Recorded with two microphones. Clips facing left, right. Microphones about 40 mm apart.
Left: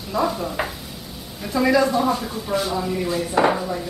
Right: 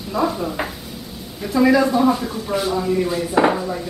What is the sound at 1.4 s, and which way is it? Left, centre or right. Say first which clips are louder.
Speech: right 3 dB; centre.